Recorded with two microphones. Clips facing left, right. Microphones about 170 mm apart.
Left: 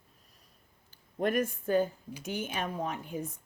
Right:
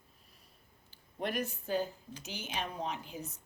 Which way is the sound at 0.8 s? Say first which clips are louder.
Left 7 dB; 45° left (ahead or behind).